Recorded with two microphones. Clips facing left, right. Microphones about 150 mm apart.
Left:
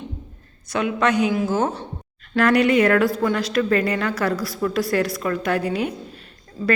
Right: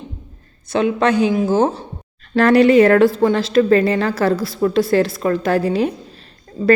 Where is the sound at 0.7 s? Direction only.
30° right (ahead or behind).